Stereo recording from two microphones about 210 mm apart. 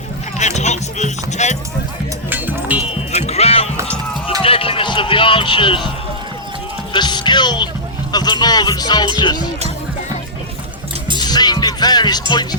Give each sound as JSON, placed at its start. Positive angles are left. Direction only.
{"t": 0.3, "sound": "music", "side_deg": 35}
{"t": 2.3, "sound": "music", "side_deg": -10}
{"t": 3.1, "sound": "music", "side_deg": 30}
{"t": 6.9, "sound": "music", "side_deg": 20}
{"t": 8.1, "sound": "speech", "side_deg": 20}
{"t": 11.2, "sound": "music", "side_deg": 20}
{"t": 12.3, "sound": "speech", "side_deg": 20}